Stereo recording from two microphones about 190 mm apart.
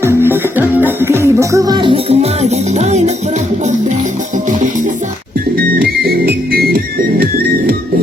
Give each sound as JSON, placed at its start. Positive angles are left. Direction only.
{"t": 0.0, "sound": "music", "side_deg": -10}
{"t": 5.5, "sound": "music", "side_deg": -55}